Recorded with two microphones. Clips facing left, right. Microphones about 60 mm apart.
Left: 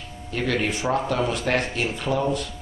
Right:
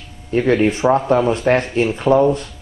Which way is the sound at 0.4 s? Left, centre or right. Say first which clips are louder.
Right 10 dB; centre.